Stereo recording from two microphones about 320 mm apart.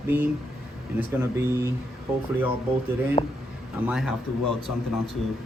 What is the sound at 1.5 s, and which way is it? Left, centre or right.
Speech, centre.